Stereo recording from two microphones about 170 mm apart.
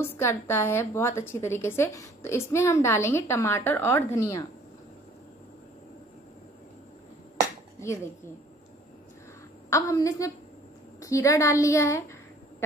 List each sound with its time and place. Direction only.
0.0 s a woman's voice: 15° left (ahead or behind)
7.8 s a woman's voice: 15° left (ahead or behind)
9.7 s a woman's voice: 20° left (ahead or behind)